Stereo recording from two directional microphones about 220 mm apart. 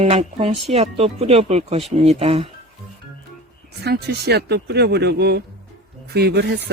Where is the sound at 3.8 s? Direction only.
50° right (ahead or behind).